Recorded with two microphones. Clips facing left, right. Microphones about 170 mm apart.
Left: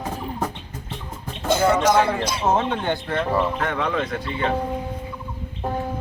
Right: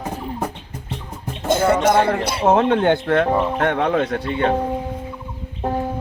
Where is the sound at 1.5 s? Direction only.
50° right (ahead or behind).